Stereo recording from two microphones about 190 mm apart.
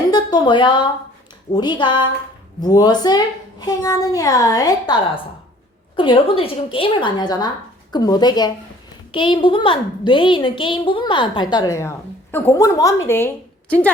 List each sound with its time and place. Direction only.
0.1 s a woman's voice: 20° left (ahead or behind)